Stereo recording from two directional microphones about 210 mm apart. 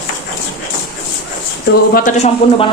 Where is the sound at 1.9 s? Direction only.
40° left (ahead or behind).